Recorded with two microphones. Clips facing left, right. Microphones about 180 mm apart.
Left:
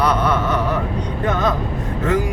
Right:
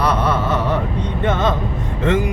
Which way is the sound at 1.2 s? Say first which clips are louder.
Right 1 dB; 25° right (ahead or behind).